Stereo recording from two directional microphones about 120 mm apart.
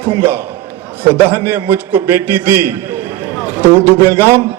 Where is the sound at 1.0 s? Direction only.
20° right (ahead or behind).